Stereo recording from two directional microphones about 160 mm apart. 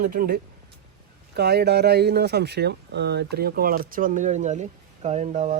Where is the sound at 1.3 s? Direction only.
90° right.